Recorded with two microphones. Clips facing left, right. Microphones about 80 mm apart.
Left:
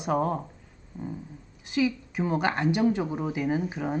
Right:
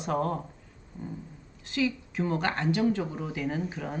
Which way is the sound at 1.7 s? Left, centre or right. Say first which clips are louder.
Left 3 dB; centre.